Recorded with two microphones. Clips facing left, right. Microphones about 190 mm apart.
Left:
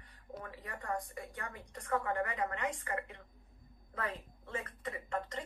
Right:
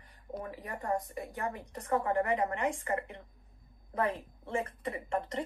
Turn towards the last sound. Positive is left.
turn(degrees=-25)  # may be behind; listen again after turning